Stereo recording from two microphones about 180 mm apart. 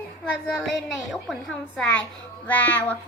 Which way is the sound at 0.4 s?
Centre (ahead or behind).